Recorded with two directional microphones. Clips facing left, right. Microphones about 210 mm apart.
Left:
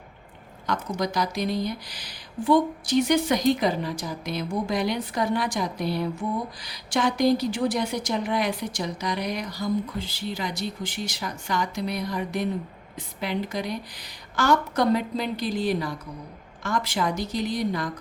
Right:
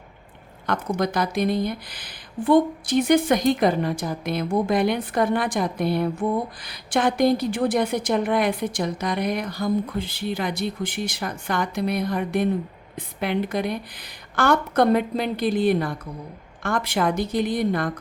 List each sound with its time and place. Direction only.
0.7 s speech: 55° right (ahead or behind)